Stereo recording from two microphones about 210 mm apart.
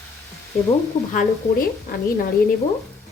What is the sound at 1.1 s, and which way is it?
Speech, 40° left (ahead or behind).